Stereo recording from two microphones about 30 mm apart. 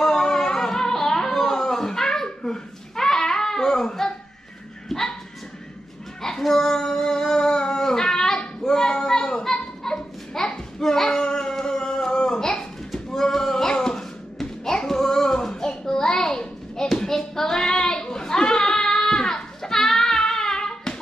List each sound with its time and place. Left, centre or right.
0.0 s music: centre
2.2 s babbling: centre
4.8 s dog: centre
6.4 s a sound: centre
8.6 s children playing: centre
13.1 s music: centre
15.5 s a sound: left
17.1 s child singing: centre